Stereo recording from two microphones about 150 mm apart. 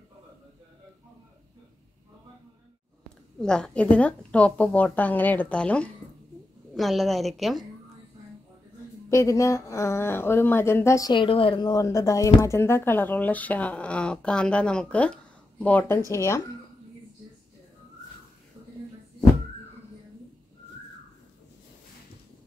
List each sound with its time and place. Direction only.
3.3 s a woman's voice: 5° left (ahead or behind)
9.1 s speech: 20° left (ahead or behind)